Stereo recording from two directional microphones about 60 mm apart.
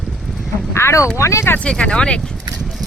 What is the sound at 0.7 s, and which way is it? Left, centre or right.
Speech, left.